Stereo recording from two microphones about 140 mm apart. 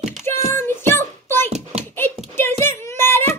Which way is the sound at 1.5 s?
50° right (ahead or behind).